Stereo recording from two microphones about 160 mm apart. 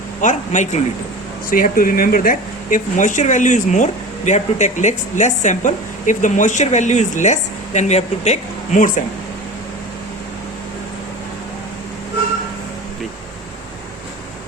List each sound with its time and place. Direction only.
0.2 s a woman's voice: 50° left (ahead or behind)
1.5 s a woman's voice: 60° left (ahead or behind)